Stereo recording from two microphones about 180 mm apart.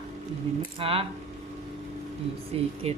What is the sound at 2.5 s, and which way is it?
Speech, 35° right (ahead or behind).